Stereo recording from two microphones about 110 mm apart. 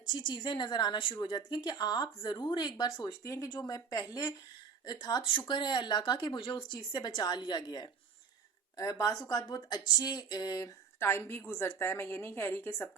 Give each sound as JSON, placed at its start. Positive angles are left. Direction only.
{"t": 0.1, "sound": "speech", "side_deg": 45}
{"t": 8.7, "sound": "speech", "side_deg": 30}
{"t": 11.0, "sound": "a woman's voice", "side_deg": 20}